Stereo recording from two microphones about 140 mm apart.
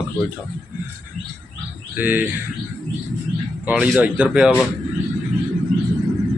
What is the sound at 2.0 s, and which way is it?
Speech, 15° right (ahead or behind).